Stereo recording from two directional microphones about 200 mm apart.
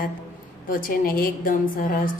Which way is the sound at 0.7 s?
45° left (ahead or behind).